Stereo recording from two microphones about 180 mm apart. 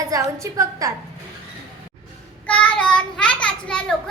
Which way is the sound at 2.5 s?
5° left (ahead or behind).